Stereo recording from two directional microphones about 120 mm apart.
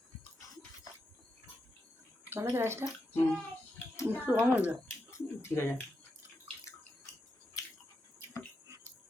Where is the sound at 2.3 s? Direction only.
20° right (ahead or behind).